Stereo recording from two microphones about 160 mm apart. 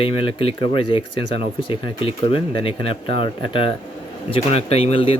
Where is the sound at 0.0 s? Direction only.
35° left (ahead or behind).